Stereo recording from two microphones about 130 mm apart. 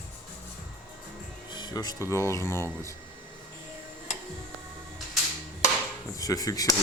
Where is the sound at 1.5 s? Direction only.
35° left (ahead or behind).